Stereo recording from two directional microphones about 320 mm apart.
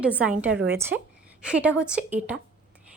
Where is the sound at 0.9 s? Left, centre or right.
Right.